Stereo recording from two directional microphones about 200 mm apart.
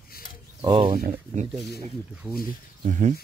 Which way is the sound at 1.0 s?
35° right (ahead or behind).